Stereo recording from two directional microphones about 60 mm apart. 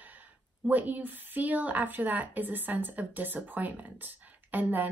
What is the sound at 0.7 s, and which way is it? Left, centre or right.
Speech, right.